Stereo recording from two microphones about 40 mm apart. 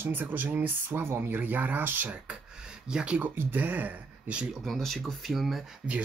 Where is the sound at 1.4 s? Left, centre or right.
Right.